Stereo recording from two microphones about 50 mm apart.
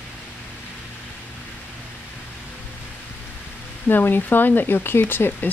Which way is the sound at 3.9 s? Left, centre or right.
Left.